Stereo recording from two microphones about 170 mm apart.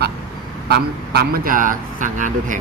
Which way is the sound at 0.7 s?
65° right (ahead or behind).